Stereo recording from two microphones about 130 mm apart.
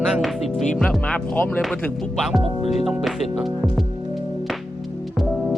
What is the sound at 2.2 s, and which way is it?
Speech, centre (ahead or behind).